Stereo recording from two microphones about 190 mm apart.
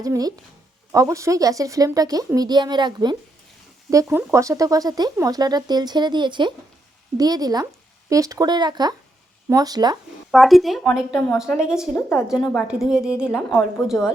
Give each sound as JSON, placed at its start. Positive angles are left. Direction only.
{"t": 0.0, "sound": "speech", "side_deg": -20}
{"t": 10.3, "sound": "a woman's voice", "side_deg": 0}
{"t": 11.9, "sound": "a woman's voice", "side_deg": 10}
{"t": 12.3, "sound": "a woman's voice", "side_deg": 0}